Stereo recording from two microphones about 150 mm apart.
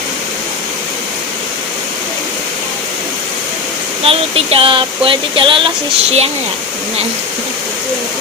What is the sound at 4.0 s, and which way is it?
Speech, 40° right (ahead or behind).